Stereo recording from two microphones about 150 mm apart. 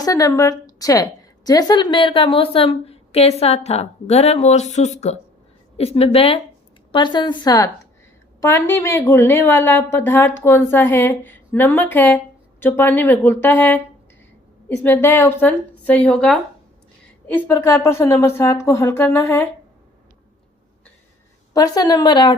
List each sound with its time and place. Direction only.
0.0 s a woman's voice: 20° left (ahead or behind)
14.8 s a woman's voice: 15° left (ahead or behind)
21.5 s speech: 25° left (ahead or behind)